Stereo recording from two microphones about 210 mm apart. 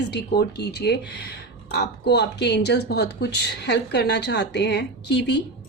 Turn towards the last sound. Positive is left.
turn(degrees=55)  # may be behind; listen again after turning